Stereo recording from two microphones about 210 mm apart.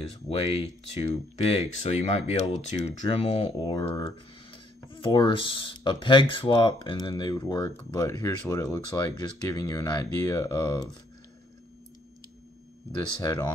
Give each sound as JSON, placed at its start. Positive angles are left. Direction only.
{"t": 0.4, "sound": "speech", "side_deg": 25}
{"t": 13.2, "sound": "speech", "side_deg": 15}